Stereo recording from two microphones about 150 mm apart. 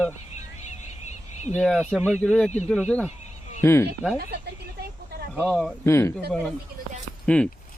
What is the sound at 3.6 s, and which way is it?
Speech, 15° left (ahead or behind).